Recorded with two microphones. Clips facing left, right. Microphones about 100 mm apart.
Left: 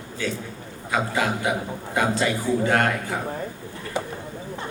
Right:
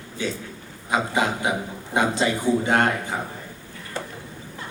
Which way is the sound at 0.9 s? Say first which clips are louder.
Right 1 dB; 20° right (ahead or behind).